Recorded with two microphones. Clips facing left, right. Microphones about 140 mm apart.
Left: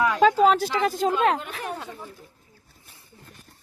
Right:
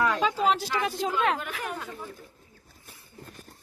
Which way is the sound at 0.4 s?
50° left (ahead or behind).